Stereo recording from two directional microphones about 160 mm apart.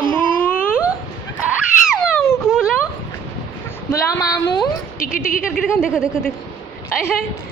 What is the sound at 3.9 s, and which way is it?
Speech, 20° left (ahead or behind).